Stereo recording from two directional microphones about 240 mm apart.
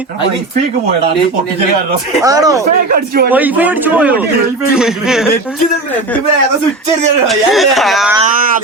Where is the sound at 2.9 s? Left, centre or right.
Right.